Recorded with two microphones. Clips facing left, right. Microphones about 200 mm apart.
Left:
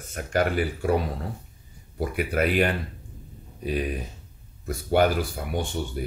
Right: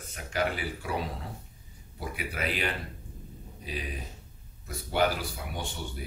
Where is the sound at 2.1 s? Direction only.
55° left (ahead or behind).